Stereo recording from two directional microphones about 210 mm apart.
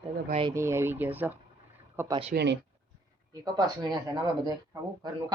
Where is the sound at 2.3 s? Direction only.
55° right (ahead or behind).